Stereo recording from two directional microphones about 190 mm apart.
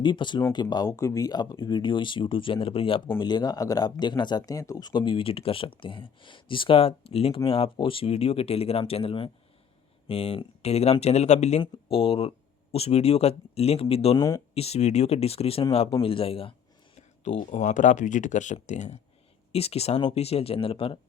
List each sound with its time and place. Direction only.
0.0 s speech: 25° left (ahead or behind)
17.2 s speech: 40° left (ahead or behind)